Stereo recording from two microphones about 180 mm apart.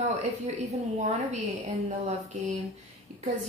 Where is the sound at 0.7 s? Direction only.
40° right (ahead or behind).